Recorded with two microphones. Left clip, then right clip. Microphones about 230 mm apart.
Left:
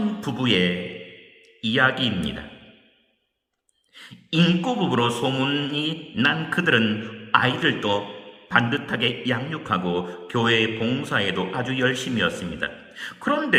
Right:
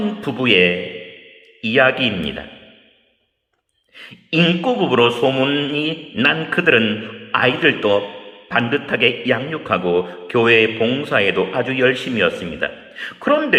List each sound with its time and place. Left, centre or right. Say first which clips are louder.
0.2 s mantra: right 9 dB; left
3.9 s mantra: right 6 dB; left